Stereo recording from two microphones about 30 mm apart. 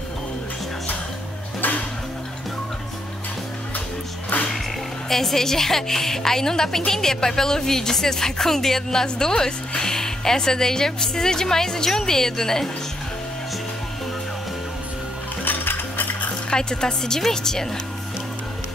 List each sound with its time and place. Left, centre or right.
5.1 s a woman's voice: centre
15.4 s music: left
16.4 s speech: left